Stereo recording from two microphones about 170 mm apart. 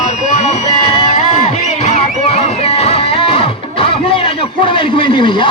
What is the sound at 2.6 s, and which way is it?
Music, 35° left (ahead or behind).